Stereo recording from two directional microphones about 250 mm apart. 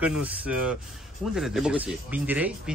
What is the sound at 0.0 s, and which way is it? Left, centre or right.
Speech, centre.